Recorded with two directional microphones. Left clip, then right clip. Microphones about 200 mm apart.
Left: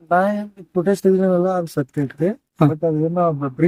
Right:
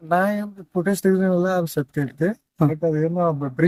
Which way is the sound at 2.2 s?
5° right (ahead or behind).